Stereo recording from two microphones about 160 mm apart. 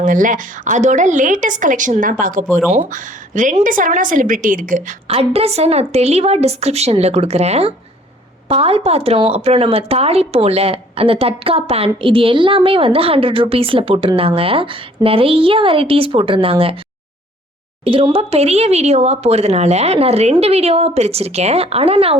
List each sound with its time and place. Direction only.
0.0 s a woman's voice: 55° right (ahead or behind)
5.0 s speech: 40° right (ahead or behind)
17.8 s speech: 35° right (ahead or behind)